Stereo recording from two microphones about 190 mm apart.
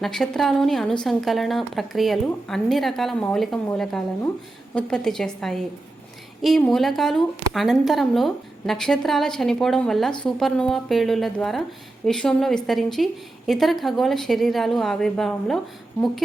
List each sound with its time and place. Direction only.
0.0 s a woman's voice: centre (ahead or behind)
4.7 s a woman's voice: 5° left (ahead or behind)